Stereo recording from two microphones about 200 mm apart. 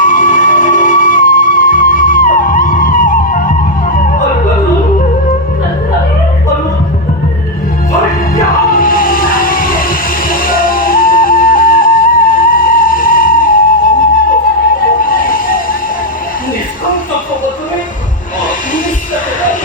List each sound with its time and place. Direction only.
0.0 s music: 40° left (ahead or behind)
8.7 s music: 45° left (ahead or behind)
15.0 s a sound: 45° left (ahead or behind)